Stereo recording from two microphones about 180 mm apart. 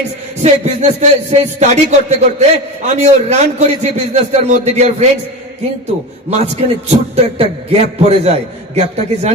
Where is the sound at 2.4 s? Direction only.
40° right (ahead or behind).